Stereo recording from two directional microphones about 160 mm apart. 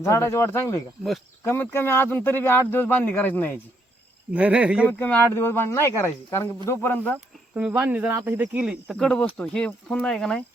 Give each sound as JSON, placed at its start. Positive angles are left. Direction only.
{"t": 0.0, "sound": "speech", "side_deg": 15}
{"t": 4.4, "sound": "speech", "side_deg": -10}
{"t": 4.9, "sound": "speech", "side_deg": 10}
{"t": 7.5, "sound": "speech", "side_deg": -10}